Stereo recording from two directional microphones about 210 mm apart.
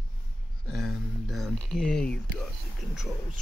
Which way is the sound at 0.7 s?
Centre (ahead or behind).